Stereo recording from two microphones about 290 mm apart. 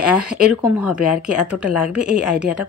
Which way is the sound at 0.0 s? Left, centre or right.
Centre.